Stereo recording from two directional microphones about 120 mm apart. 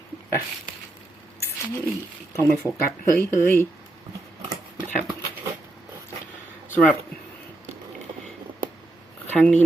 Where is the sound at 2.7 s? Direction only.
20° left (ahead or behind).